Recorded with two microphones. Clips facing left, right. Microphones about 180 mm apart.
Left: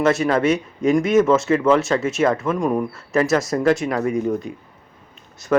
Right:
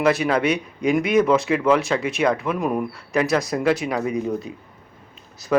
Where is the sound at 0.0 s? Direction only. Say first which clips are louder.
Left 2 dB; centre (ahead or behind).